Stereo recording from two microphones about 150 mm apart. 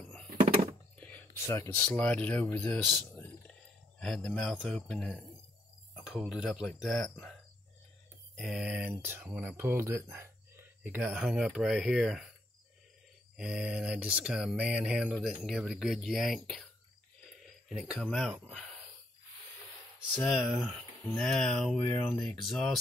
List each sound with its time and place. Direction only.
0.9 s whispering: 10° left (ahead or behind)
1.8 s speech: 10° left (ahead or behind)
4.0 s speech: 5° left (ahead or behind)
8.4 s speech: 5° right (ahead or behind)
13.4 s speech: 5° right (ahead or behind)
17.3 s cricket: centre (ahead or behind)
20.2 s speech: centre (ahead or behind)